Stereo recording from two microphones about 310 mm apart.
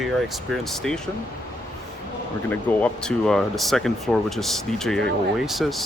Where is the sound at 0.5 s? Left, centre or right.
Centre.